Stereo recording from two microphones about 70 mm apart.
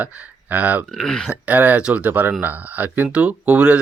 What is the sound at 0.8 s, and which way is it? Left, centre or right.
Speech, centre.